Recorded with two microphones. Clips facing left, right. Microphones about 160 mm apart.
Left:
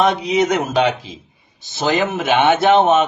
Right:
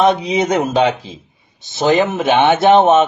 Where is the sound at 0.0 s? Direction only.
25° right (ahead or behind).